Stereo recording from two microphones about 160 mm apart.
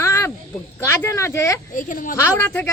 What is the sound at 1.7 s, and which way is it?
Speech, 55° left (ahead or behind).